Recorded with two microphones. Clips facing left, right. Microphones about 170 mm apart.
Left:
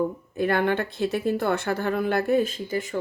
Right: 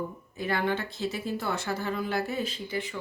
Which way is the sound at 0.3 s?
55° left (ahead or behind).